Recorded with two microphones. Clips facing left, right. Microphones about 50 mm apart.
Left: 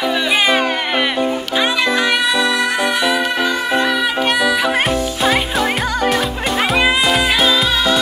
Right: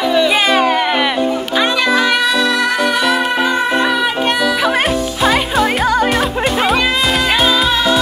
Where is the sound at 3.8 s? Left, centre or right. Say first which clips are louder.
Right 2 dB; centre.